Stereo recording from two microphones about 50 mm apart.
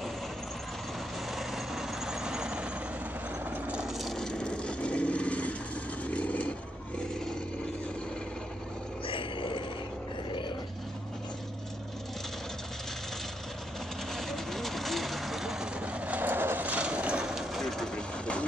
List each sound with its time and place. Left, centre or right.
1.3 s vehicle: centre
3.4 s vehicle: right
3.9 s a sound: centre
4.2 s vehicle: centre
7.0 s a sound: centre
14.1 s vehicle: centre
15.7 s vehicle: right
16.2 s vehicle: right
16.6 s a sound: right
17.2 s vehicle: centre
17.6 s vehicle: centre
17.9 s vehicle: left